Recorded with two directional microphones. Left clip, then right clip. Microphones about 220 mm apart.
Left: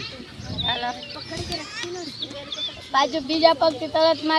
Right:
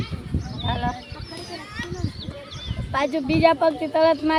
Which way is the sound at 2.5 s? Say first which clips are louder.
Left 4 dB; 35° right (ahead or behind).